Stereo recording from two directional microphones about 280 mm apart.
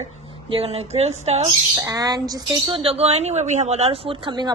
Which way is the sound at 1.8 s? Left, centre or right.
Centre.